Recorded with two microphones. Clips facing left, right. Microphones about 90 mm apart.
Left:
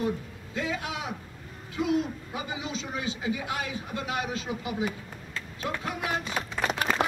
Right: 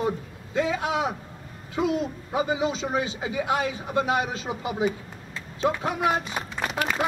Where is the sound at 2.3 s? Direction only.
25° right (ahead or behind).